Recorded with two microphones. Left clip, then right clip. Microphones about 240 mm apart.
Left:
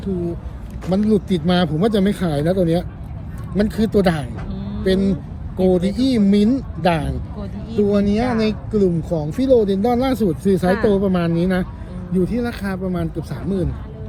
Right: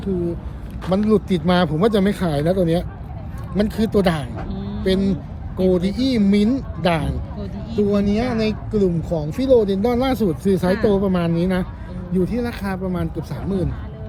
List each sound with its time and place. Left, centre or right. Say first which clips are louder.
1.1 s speech: right 1 dB; right
4.4 s a sound: right 1 dB; centre
4.8 s speech: left 2 dB; centre